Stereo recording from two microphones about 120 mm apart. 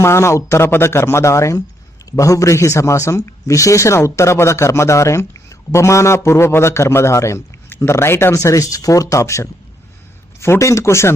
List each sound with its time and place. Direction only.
0.0 s speech: 25° left (ahead or behind)